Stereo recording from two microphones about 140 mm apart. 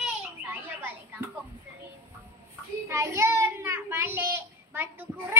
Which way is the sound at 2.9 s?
20° right (ahead or behind).